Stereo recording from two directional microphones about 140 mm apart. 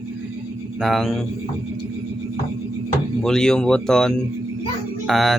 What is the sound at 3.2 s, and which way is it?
Speech, 5° left (ahead or behind).